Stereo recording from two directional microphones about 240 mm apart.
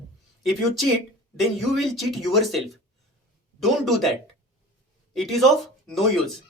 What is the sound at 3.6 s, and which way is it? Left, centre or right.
Speech, centre.